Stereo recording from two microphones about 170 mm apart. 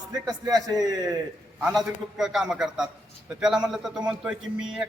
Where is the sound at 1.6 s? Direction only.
Centre (ahead or behind).